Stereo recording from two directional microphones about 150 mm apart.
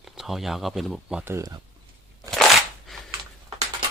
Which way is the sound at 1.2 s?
20° right (ahead or behind).